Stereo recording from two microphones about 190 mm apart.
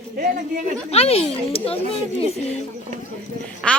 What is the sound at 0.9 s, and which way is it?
Speech, 35° left (ahead or behind).